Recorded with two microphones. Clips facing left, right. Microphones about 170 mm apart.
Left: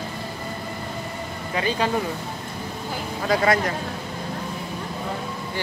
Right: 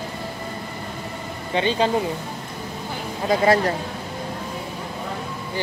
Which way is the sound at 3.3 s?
30° right (ahead or behind).